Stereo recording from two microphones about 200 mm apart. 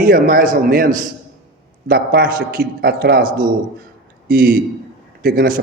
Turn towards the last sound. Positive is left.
turn(degrees=-45)  # may be behind; listen again after turning